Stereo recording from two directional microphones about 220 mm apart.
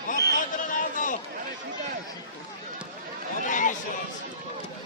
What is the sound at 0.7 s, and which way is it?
Chatter, 35° left (ahead or behind).